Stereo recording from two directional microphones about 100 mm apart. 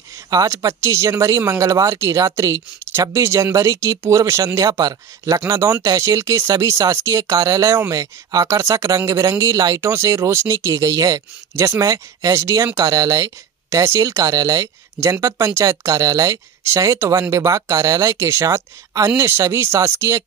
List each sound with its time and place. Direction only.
0.3 s speech: 35° right (ahead or behind)